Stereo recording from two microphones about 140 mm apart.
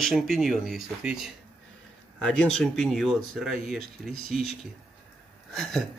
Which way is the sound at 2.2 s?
5° left (ahead or behind).